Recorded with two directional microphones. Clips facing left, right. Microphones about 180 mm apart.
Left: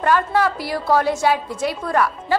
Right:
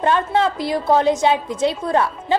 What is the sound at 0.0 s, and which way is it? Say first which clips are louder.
A woman's voice: even; 25° right (ahead or behind).